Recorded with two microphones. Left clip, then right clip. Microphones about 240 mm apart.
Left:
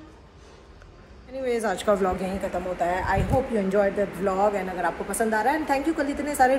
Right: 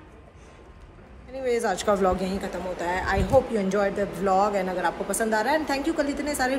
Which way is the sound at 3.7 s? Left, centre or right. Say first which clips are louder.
Left 3 dB; centre.